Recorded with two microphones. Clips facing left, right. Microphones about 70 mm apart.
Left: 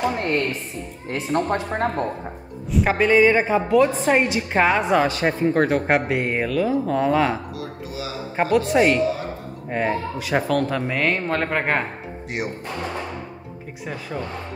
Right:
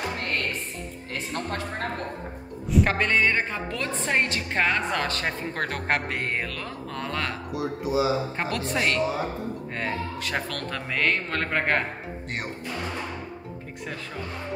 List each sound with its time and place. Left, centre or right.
1.3 s speech: left
2.7 s a woman's voice: centre
7.5 s speech: right
8.4 s a woman's voice: centre